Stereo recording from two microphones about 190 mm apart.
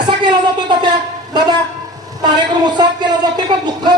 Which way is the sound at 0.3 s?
25° right (ahead or behind).